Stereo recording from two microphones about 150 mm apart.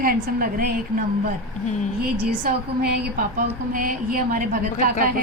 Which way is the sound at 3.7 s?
65° right (ahead or behind).